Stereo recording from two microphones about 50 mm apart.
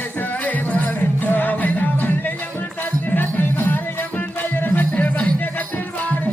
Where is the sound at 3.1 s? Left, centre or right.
Left.